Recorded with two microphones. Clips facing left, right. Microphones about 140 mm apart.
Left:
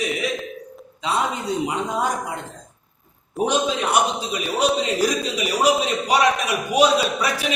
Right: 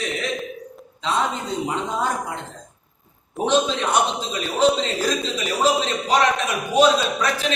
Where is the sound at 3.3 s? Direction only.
10° left (ahead or behind).